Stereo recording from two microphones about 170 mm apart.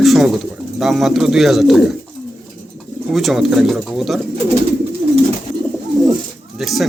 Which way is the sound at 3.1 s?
Centre (ahead or behind).